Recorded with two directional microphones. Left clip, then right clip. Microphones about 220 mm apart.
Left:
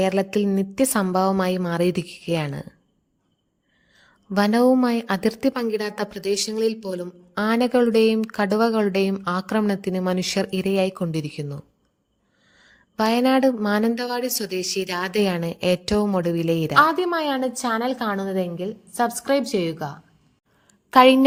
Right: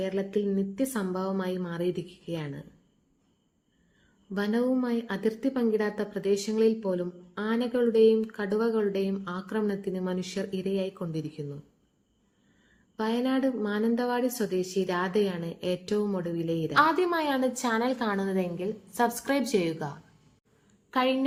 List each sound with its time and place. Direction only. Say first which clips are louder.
0.0 s a woman's voice: left 8 dB; 50° left (ahead or behind)
4.4 s a woman's voice: left 10 dB; 45° left (ahead or behind)
13.0 s a woman's voice: left 10 dB; 45° left (ahead or behind)
16.7 s a woman's voice: left 5 dB; 25° left (ahead or behind)
20.9 s a woman's voice: left 13 dB; 45° left (ahead or behind)